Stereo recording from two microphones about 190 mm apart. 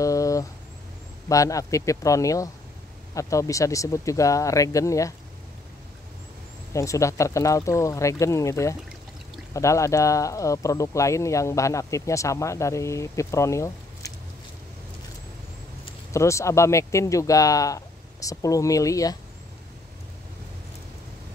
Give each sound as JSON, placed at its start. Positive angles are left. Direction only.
{"t": 0.0, "sound": "a sound", "side_deg": 15}
{"t": 1.3, "sound": "speech", "side_deg": 15}
{"t": 6.7, "sound": "speech", "side_deg": 15}
{"t": 16.1, "sound": "speech", "side_deg": 15}